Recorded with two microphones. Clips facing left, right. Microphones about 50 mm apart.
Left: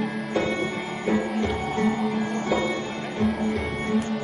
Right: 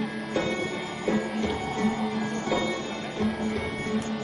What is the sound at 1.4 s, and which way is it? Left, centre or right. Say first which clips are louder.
Music: left 3 dB; left.